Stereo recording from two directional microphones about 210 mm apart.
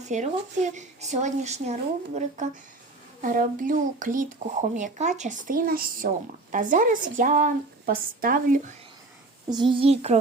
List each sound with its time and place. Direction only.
0.1 s speech: 35° right (ahead or behind)
9.5 s a child's voice: 20° right (ahead or behind)